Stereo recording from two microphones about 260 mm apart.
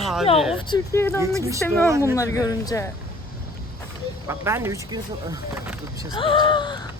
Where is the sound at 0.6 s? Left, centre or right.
Centre.